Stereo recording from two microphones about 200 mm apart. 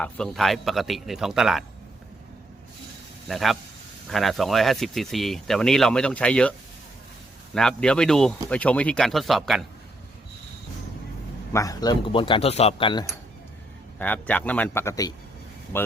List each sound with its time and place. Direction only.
0.0 s speech: centre (ahead or behind)
3.2 s speech: centre (ahead or behind)
7.5 s speech: 5° left (ahead or behind)
11.5 s speech: 15° left (ahead or behind)
14.0 s speech: 10° left (ahead or behind)